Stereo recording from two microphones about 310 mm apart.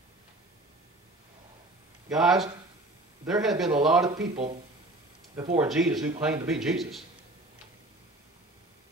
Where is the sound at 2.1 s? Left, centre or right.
Centre.